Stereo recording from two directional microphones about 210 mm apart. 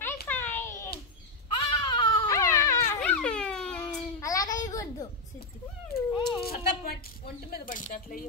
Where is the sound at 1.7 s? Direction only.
25° left (ahead or behind); by 3.8 s 5° left (ahead or behind).